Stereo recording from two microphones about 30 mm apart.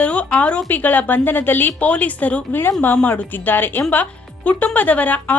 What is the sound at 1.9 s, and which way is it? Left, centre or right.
Speech, left.